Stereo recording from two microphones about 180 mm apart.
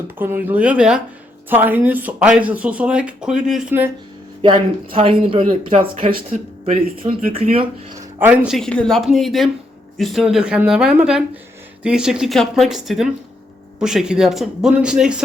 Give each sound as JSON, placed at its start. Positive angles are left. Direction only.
{"t": 0.2, "sound": "speech", "side_deg": -10}
{"t": 4.4, "sound": "speech", "side_deg": -30}
{"t": 8.2, "sound": "speech", "side_deg": -5}